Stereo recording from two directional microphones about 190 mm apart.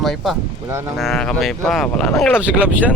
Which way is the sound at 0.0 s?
Centre (ahead or behind).